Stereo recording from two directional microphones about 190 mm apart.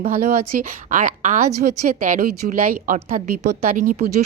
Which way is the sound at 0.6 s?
45° right (ahead or behind).